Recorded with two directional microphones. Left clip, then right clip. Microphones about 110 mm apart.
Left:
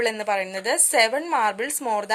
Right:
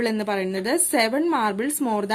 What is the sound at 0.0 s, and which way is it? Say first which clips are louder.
A woman's voice: left 1 dB; 25° left (ahead or behind).